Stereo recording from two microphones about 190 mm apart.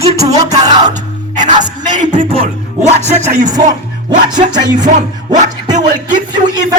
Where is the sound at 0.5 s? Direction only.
20° right (ahead or behind).